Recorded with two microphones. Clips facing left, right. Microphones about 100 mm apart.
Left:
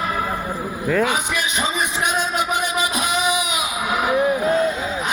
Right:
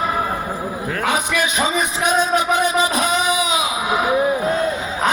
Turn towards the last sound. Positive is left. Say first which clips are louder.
# right 2 dB
turn(degrees=-25)  # may be behind; listen again after turning